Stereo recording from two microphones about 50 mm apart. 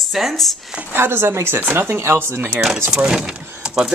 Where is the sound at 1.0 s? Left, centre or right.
Right.